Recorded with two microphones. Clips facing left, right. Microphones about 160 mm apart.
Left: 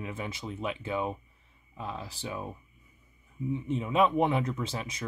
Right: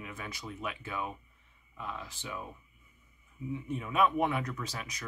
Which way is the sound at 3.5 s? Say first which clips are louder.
Left 5 dB; 25° left (ahead or behind).